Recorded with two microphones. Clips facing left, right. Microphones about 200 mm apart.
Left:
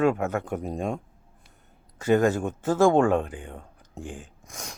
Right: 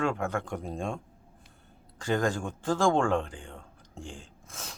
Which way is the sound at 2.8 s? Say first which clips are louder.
Left 6 dB; 5° left (ahead or behind).